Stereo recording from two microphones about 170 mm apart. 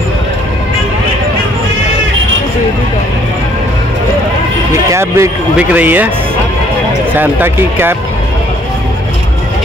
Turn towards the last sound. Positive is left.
turn(degrees=-10)  # may be behind; listen again after turning